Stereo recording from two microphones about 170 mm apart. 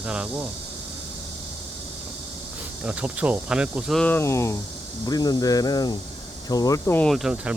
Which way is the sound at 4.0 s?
15° left (ahead or behind).